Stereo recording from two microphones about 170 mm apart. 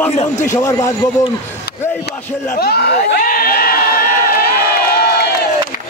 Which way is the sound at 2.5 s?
65° left (ahead or behind).